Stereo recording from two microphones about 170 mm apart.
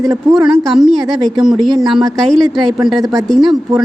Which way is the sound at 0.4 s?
Centre (ahead or behind).